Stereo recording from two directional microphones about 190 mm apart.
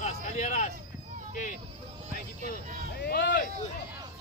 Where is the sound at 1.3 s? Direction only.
45° left (ahead or behind).